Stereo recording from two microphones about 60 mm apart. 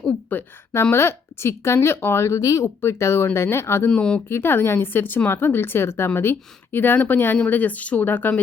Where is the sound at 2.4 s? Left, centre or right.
Left.